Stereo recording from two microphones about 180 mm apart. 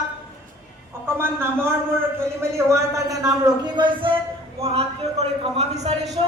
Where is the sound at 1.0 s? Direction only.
15° right (ahead or behind).